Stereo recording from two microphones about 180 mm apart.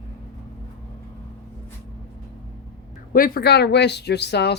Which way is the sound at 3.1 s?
55° left (ahead or behind).